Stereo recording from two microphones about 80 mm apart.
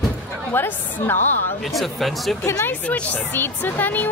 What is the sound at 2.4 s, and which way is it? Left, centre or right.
Speech, left.